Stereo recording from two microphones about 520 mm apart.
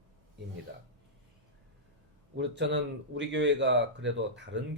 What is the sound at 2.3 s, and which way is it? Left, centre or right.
A man's voice, centre.